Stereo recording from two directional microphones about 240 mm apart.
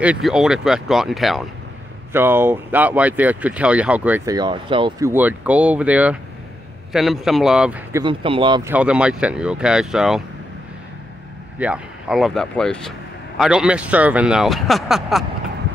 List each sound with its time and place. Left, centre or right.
0.0 s speech: centre
8.0 s speech: right
8.7 s speech: centre
11.5 s speech: centre